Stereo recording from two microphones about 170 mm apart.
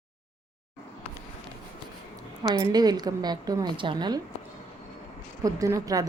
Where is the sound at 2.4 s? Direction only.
25° right (ahead or behind).